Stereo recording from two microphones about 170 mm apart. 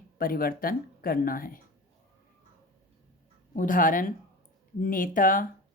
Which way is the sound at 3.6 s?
55° left (ahead or behind).